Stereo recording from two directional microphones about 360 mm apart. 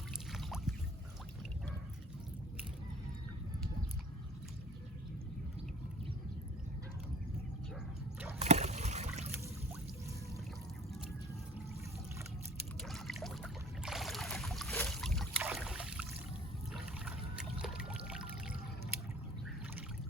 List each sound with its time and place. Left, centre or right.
0.3 s boat: centre
8.4 s trickle: centre
12.8 s boat: centre
16.7 s trickle: centre